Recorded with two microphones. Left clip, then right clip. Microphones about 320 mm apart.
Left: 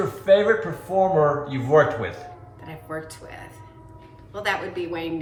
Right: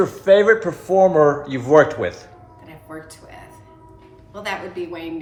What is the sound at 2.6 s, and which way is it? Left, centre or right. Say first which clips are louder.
Music: left 4 dB; centre.